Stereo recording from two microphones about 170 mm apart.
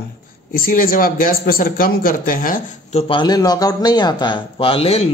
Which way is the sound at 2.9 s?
35° left (ahead or behind).